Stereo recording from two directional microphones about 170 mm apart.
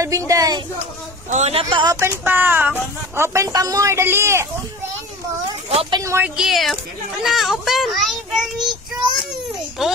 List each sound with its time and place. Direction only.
0.0 s a woman's voice: 20° right (ahead or behind)
1.3 s speech: 40° right (ahead or behind)
2.0 s speech: 15° right (ahead or behind)
5.7 s speech: 35° right (ahead or behind)
5.9 s a woman's voice: 15° right (ahead or behind)